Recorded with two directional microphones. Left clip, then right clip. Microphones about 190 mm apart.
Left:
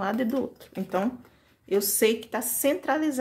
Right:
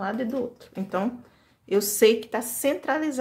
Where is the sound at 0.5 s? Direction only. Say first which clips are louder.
Even; 5° left (ahead or behind).